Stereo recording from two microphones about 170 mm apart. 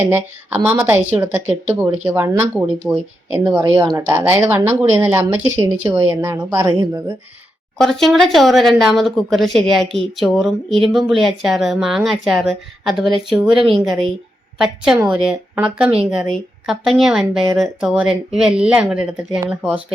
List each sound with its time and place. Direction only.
0.0 s speech: 10° right (ahead or behind)
3.6 s speech: 20° right (ahead or behind)
4.0 s speech: 10° right (ahead or behind)
7.8 s a woman's voice: centre (ahead or behind)